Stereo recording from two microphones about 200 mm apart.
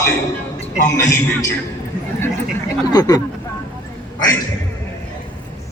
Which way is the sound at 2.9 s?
20° left (ahead or behind).